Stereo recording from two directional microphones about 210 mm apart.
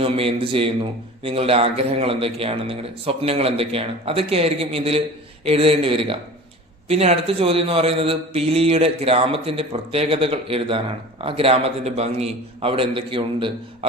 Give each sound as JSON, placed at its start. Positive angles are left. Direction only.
{"t": 0.0, "sound": "a man's voice", "side_deg": -25}